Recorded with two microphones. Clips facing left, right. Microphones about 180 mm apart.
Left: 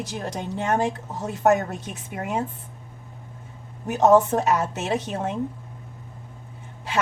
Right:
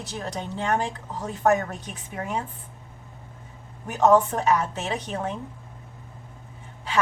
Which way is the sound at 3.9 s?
20° left (ahead or behind).